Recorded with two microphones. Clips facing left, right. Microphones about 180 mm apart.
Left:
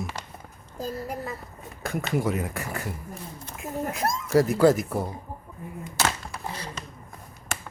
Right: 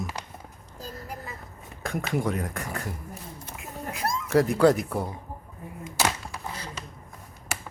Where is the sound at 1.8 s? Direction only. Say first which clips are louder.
Left 1 dB; centre (ahead or behind).